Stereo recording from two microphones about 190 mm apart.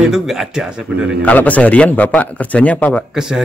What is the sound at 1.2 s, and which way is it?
A man's voice, 10° left (ahead or behind).